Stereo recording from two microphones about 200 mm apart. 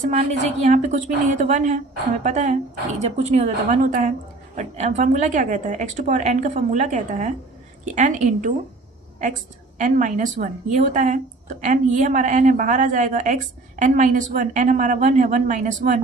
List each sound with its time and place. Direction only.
0.0 s a woman's voice: 35° right (ahead or behind)
9.7 s a woman's voice: 40° right (ahead or behind)